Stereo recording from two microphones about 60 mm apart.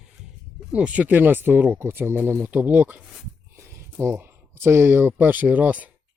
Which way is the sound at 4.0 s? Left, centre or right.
Right.